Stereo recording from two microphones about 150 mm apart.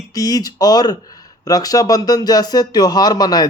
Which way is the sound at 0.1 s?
25° left (ahead or behind).